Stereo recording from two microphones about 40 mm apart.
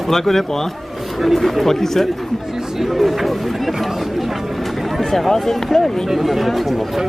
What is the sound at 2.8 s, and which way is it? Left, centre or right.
Speech, centre.